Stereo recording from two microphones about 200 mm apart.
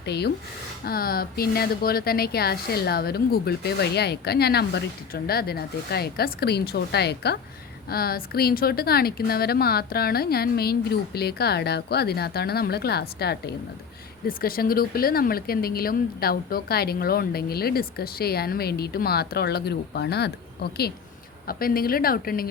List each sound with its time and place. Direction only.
0.0 s speech: 55° left (ahead or behind)